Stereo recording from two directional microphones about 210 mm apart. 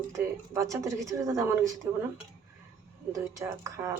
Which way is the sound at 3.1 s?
15° right (ahead or behind).